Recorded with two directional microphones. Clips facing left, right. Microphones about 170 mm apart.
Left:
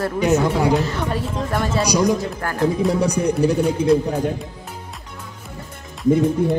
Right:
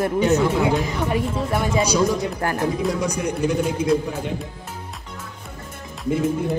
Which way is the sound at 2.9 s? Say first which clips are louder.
Left 5 dB; 35° left (ahead or behind).